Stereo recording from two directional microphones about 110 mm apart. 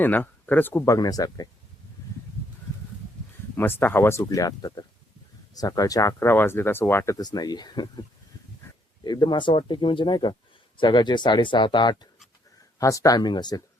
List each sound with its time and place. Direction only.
0.0 s speech: 15° left (ahead or behind)
0.9 s speech: 35° left (ahead or behind)
3.5 s speech: 20° left (ahead or behind); by 8.0 s 40° left (ahead or behind)
9.0 s speech: 45° left (ahead or behind)
12.8 s speech: 30° left (ahead or behind)